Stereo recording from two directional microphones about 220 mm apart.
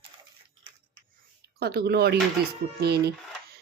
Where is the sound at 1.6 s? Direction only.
45° right (ahead or behind).